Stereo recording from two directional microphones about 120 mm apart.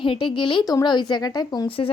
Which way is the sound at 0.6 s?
30° left (ahead or behind).